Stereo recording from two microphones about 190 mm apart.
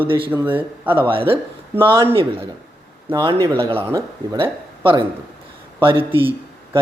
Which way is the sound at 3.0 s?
20° right (ahead or behind).